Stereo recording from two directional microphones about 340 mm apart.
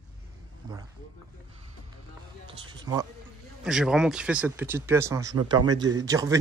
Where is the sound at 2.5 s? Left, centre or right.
Centre.